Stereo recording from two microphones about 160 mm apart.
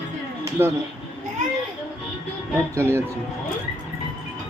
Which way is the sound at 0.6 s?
15° right (ahead or behind).